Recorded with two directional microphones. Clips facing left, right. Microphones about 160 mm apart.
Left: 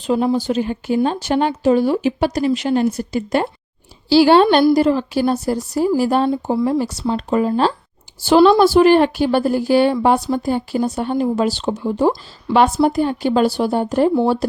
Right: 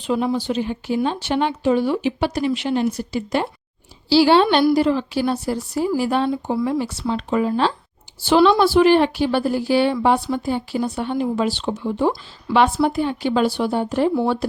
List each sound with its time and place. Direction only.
0.1 s speech: 40° left (ahead or behind)
6.3 s speech: 30° left (ahead or behind)
6.7 s speech: 40° left (ahead or behind)